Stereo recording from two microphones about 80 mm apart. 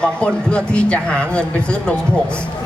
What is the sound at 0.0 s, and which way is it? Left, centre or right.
A man's voice, centre.